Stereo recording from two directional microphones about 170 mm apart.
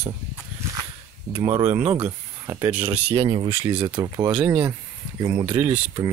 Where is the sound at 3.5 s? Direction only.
15° right (ahead or behind).